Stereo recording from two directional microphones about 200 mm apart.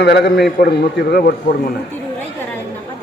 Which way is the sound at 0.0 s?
55° left (ahead or behind).